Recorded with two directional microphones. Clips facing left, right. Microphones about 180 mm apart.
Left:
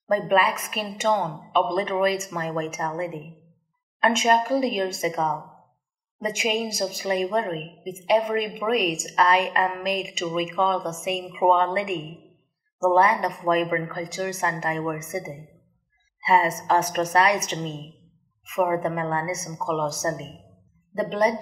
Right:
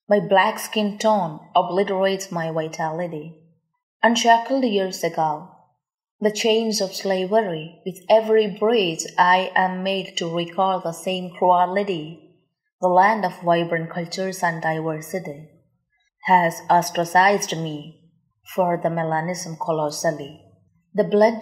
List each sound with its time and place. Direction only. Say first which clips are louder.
0.1 s a woman's voice: right 4 dB; 35° right (ahead or behind)
4.0 s a woman's voice: right 4 dB; 35° right (ahead or behind)